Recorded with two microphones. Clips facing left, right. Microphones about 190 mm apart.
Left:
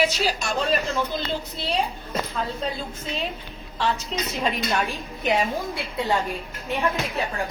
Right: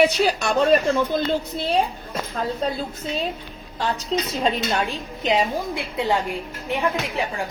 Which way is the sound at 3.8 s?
30° right (ahead or behind).